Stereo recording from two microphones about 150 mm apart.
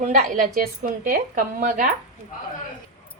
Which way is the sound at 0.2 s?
65° right (ahead or behind).